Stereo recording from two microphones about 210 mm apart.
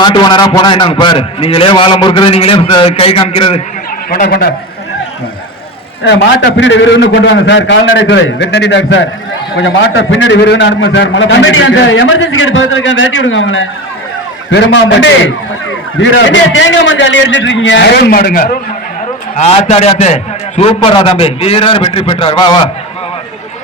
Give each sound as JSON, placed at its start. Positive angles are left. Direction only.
{"t": 0.0, "sound": "a man's voice", "side_deg": 20}
{"t": 4.1, "sound": "a man's voice", "side_deg": 45}
{"t": 6.6, "sound": "a man's voice", "side_deg": 60}
{"t": 19.4, "sound": "a man's voice", "side_deg": 30}